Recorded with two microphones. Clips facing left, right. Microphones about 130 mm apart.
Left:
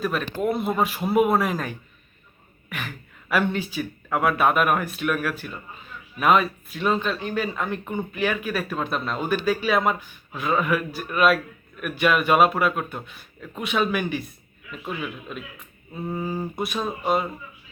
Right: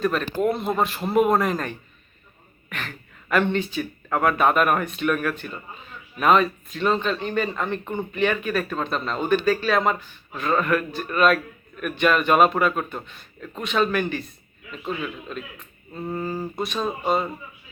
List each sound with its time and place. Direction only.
0.0 s speech: 5° left (ahead or behind)